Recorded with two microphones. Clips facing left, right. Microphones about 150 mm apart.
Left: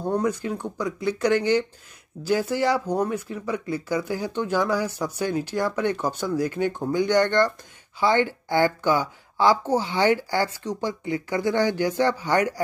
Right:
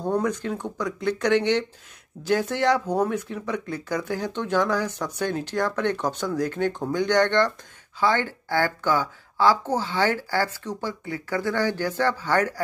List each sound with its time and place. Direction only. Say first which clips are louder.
0.0 s speech: even; 5° left (ahead or behind)
8.0 s a woman's voice: left 2 dB; 15° left (ahead or behind)